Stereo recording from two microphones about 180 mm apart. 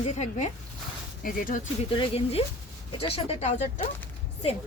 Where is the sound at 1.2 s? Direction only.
50° left (ahead or behind).